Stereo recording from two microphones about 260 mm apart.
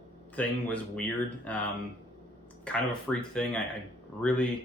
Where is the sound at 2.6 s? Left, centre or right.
Centre.